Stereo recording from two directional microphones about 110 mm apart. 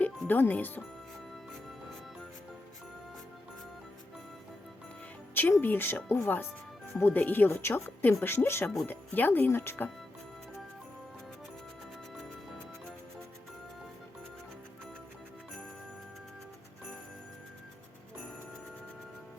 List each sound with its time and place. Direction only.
0.0 s music: 15° left (ahead or behind)
5.3 s speech: 20° left (ahead or behind)